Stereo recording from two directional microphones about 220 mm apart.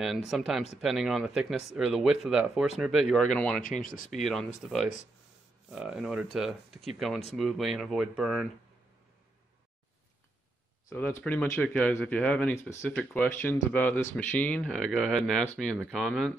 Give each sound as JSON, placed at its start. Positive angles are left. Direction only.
{"t": 0.3, "sound": "speech", "side_deg": 0}
{"t": 3.6, "sound": "speech", "side_deg": 40}
{"t": 4.1, "sound": "speech", "side_deg": 0}
{"t": 5.7, "sound": "speech", "side_deg": -5}
{"t": 10.9, "sound": "speech", "side_deg": 10}